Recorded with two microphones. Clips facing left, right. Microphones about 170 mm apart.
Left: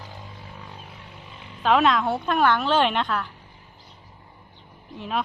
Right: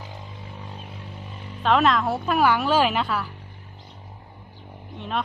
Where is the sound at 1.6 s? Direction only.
Centre (ahead or behind).